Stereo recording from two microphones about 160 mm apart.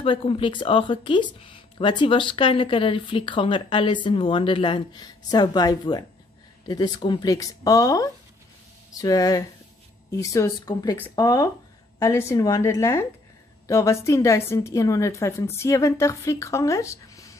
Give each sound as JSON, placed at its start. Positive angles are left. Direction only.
{"t": 0.0, "sound": "a woman's voice", "side_deg": 35}